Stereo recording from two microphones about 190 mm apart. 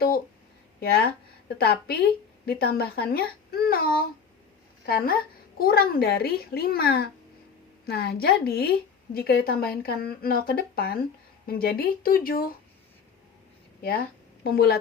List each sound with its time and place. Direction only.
0.8 s a woman's voice: 55° left (ahead or behind)
13.8 s a woman's voice: 50° left (ahead or behind)